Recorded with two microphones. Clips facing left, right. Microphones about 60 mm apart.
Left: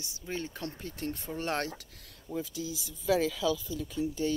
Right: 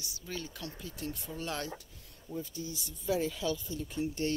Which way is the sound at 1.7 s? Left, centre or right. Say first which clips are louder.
Left 1 dB; left.